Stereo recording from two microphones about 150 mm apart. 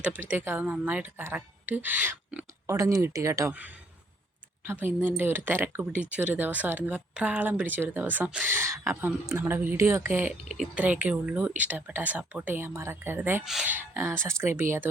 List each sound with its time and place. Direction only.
0.0 s speech: 10° right (ahead or behind)
4.6 s speech: 15° right (ahead or behind)
13.4 s speech: 5° right (ahead or behind)